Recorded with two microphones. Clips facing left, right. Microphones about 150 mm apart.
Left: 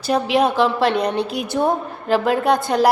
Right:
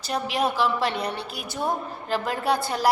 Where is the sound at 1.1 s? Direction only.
20° left (ahead or behind).